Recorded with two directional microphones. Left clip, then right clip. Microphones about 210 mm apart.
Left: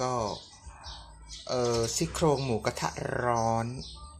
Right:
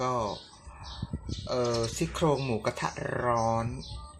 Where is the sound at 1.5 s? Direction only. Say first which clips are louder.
Left 1 dB; 5° left (ahead or behind).